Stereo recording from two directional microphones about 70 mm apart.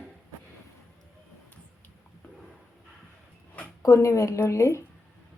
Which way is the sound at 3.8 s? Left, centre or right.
Left.